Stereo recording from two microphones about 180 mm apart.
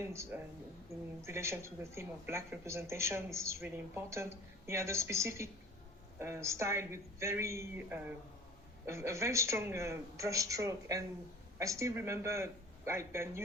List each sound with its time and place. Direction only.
0.1 s speech: 15° right (ahead or behind)